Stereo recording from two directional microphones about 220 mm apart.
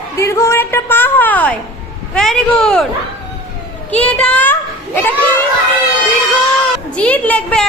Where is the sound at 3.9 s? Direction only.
5° left (ahead or behind).